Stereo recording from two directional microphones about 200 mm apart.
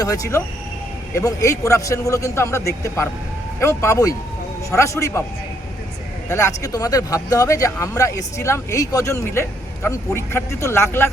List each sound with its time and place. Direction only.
0.0 s speech: 15° left (ahead or behind)
6.2 s speech: 15° left (ahead or behind)